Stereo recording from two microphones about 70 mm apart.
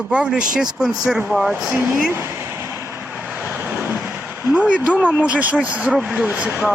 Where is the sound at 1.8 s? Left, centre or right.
Right.